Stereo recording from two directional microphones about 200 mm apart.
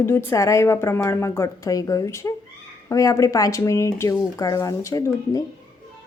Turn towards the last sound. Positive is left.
turn(degrees=15)  # may be behind; listen again after turning